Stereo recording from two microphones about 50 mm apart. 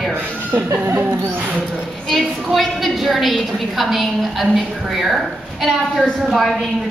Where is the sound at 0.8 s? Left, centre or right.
Right.